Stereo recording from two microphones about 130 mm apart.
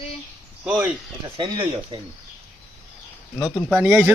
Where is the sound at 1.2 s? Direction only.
35° right (ahead or behind).